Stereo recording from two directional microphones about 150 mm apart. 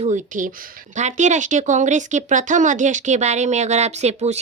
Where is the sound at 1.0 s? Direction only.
55° right (ahead or behind).